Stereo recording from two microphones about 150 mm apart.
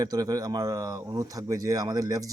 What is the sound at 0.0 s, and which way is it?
A man's voice, 25° right (ahead or behind).